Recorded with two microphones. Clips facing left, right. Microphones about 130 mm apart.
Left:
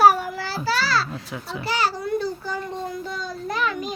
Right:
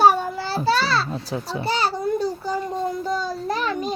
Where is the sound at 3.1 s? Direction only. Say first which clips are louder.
Right 5 dB; 35° right (ahead or behind).